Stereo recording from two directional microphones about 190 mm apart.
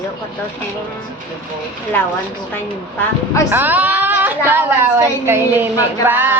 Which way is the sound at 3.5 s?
10° right (ahead or behind).